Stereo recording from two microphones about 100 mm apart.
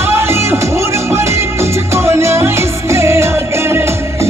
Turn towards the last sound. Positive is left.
turn(degrees=-25)  # may be behind; listen again after turning